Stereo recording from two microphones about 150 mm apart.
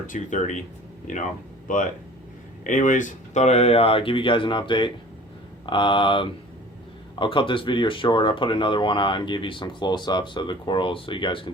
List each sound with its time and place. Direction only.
0.1 s speech: 55° left (ahead or behind); by 11.5 s 35° left (ahead or behind)